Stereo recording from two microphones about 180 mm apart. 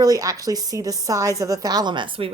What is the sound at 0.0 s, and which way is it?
A woman's voice, 20° right (ahead or behind).